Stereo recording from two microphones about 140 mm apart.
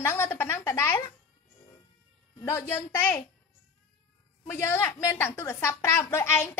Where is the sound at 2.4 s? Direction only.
15° left (ahead or behind).